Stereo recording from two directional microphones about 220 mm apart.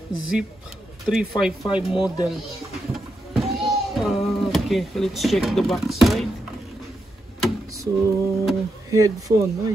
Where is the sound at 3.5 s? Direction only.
Centre (ahead or behind).